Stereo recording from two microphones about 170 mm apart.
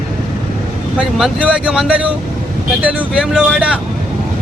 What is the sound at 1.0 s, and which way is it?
Speech, 5° right (ahead or behind).